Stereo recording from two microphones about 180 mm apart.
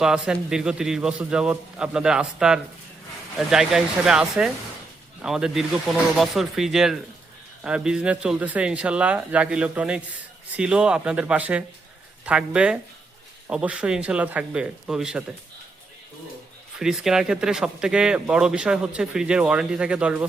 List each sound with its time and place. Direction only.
0.0 s speech: 5° right (ahead or behind)
16.7 s speech: 5° right (ahead or behind)